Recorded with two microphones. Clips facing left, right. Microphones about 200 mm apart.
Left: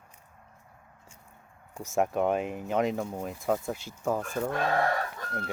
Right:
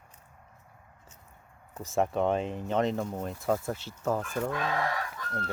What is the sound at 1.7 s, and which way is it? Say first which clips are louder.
Speech: left 1 dB; 15° left (ahead or behind).